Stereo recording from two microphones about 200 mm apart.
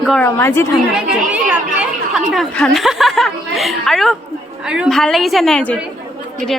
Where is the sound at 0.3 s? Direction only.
10° left (ahead or behind).